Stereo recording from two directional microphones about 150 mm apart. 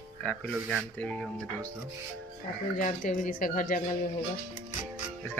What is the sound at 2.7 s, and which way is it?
Speech, 55° left (ahead or behind).